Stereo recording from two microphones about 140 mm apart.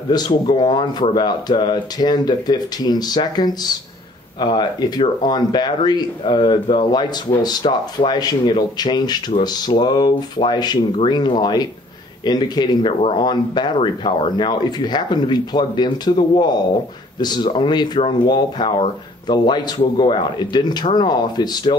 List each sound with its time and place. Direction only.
0.1 s speech: 30° left (ahead or behind)